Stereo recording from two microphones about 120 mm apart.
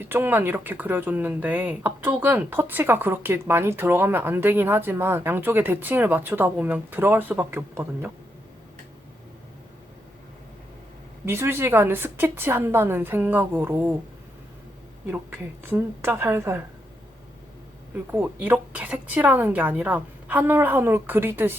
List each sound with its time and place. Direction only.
0.0 s speech: 15° right (ahead or behind)
11.3 s a woman's voice: 20° right (ahead or behind)
15.0 s a woman's voice: 15° right (ahead or behind)
17.9 s speech: 15° right (ahead or behind)